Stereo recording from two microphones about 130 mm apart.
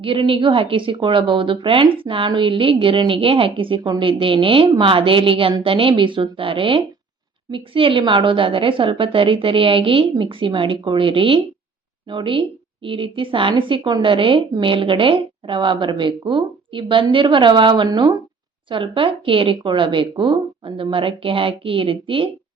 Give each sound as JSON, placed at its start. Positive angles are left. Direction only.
{"t": 0.0, "sound": "a woman's voice", "side_deg": -45}